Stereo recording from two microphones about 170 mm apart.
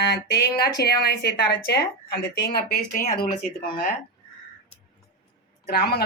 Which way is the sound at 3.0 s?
55° left (ahead or behind).